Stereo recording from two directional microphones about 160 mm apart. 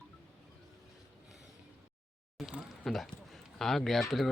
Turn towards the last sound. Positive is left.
turn(degrees=0)  # may be behind; listen again after turning